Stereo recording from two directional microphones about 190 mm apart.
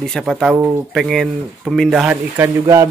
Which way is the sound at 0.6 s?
15° right (ahead or behind).